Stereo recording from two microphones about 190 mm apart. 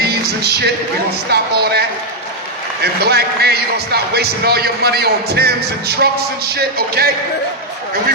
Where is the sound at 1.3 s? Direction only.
60° right (ahead or behind).